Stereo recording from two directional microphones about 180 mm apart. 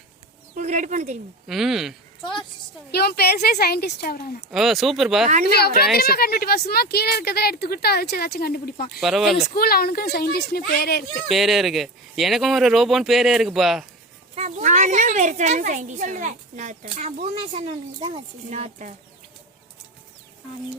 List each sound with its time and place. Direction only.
0.5 s a woman's voice: 40° right (ahead or behind)
1.5 s speech: centre (ahead or behind)
2.9 s a woman's voice: 60° left (ahead or behind)
4.5 s speech: centre (ahead or behind)
5.5 s a woman's voice: 60° left (ahead or behind)
9.0 s speech: centre (ahead or behind)
9.6 s a woman's voice: 55° left (ahead or behind)
11.3 s speech: centre (ahead or behind)
14.3 s a woman's voice: 40° right (ahead or behind)